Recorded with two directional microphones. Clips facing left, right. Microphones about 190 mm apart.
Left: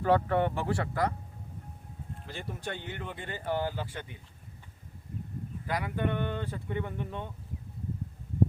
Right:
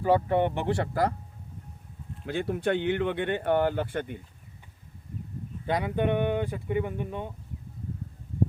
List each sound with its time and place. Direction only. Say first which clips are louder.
0.0 s speech: right 3 dB; 15° right (ahead or behind); by 1.1 s 30° right (ahead or behind)
2.2 s speech: right 12 dB; 60° right (ahead or behind)
5.6 s speech: right 6 dB; 25° right (ahead or behind)